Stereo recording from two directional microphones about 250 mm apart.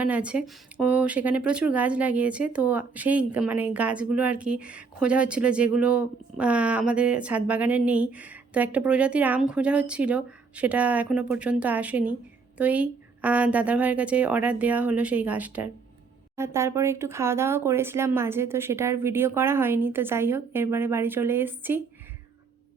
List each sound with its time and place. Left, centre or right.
0.0 s speech: centre